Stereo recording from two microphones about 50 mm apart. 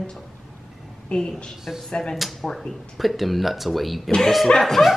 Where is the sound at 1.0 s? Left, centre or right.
Centre.